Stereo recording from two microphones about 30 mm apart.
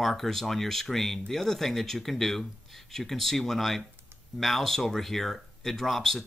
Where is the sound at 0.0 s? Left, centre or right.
Centre.